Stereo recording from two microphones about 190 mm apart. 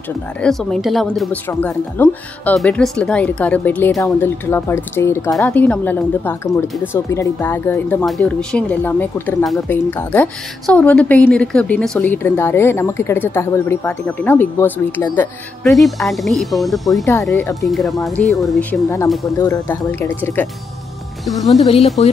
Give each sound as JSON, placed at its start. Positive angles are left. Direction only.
{"t": 0.4, "sound": "speech", "side_deg": 5}
{"t": 1.5, "sound": "a woman's voice", "side_deg": 10}
{"t": 21.3, "sound": "speech", "side_deg": 0}
{"t": 21.5, "sound": "speech", "side_deg": 35}